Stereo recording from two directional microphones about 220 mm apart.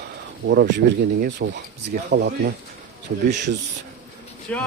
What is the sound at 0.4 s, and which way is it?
Speech, 50° right (ahead or behind).